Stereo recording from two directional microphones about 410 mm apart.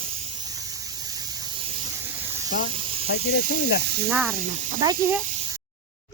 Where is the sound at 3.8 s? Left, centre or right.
Right.